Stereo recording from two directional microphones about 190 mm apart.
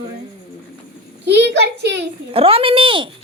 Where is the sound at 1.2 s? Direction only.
60° right (ahead or behind).